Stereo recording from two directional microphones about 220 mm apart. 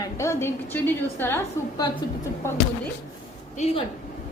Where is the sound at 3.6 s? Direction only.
30° left (ahead or behind).